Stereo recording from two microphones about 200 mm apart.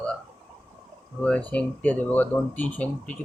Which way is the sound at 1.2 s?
5° left (ahead or behind).